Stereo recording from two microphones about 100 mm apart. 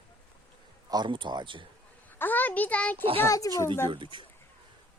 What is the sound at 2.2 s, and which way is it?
Speech, 20° left (ahead or behind).